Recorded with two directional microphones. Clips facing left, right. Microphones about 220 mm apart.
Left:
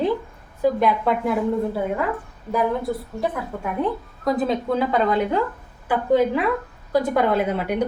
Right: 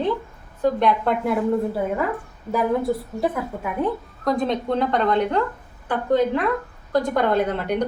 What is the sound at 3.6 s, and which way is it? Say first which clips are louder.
A woman's voice: left 1 dB; centre (ahead or behind).